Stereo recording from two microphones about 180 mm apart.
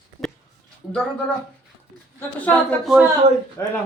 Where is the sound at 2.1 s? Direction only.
10° left (ahead or behind).